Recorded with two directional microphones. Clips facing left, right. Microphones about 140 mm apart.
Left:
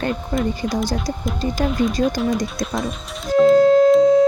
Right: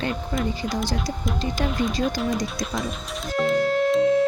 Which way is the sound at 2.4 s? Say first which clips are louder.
Left 4 dB; 50° left (ahead or behind).